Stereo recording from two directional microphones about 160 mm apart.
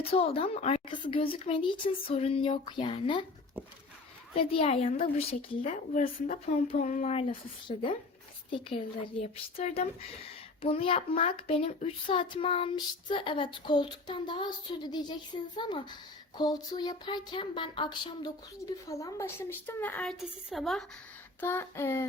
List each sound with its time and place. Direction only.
0.1 s a child's voice: 35° left (ahead or behind)
4.4 s a child's voice: 40° left (ahead or behind); by 20.8 s centre (ahead or behind)
21.4 s child singing: 15° left (ahead or behind)